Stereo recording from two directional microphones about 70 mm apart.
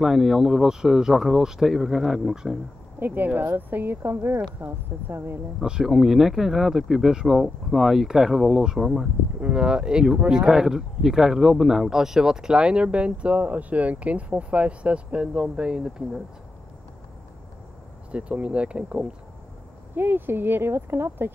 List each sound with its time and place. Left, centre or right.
0.0 s speech: centre
3.0 s speech: right
5.6 s speech: centre
9.4 s speech: centre
18.1 s speech: centre
20.0 s speech: right